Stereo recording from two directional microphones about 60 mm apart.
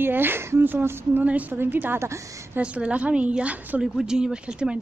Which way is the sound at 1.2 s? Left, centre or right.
Right.